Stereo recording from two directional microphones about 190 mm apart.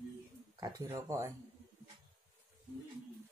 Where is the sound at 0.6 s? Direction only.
15° right (ahead or behind).